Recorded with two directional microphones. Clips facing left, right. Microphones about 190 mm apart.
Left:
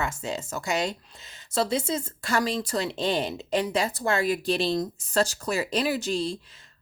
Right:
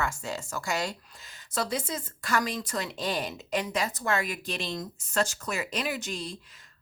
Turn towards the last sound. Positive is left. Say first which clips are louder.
# left 7 dB
turn(degrees=30)  # may be behind; listen again after turning